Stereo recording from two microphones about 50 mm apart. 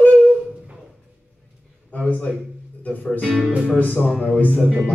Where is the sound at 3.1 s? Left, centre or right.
Centre.